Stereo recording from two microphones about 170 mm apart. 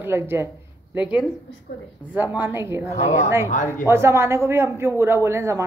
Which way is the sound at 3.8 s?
15° right (ahead or behind).